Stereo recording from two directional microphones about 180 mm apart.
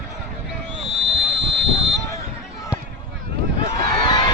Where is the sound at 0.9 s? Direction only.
75° right (ahead or behind).